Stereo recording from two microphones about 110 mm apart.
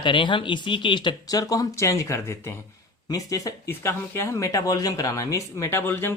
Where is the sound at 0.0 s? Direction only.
45° left (ahead or behind); by 3.5 s 30° left (ahead or behind).